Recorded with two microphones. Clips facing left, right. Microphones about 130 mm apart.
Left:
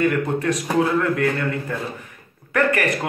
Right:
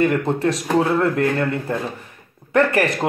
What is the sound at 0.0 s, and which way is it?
A man's voice, 30° right (ahead or behind).